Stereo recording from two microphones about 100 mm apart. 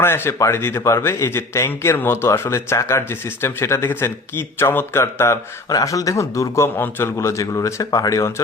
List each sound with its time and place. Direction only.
0.0 s a man's voice: 25° left (ahead or behind)
5.6 s a man's voice: 35° left (ahead or behind)